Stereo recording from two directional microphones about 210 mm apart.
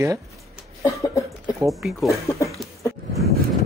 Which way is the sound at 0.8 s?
15° left (ahead or behind).